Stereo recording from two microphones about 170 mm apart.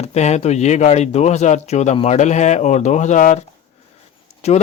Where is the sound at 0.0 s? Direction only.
40° left (ahead or behind).